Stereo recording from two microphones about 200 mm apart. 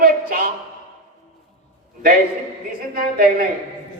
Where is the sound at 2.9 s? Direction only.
45° right (ahead or behind).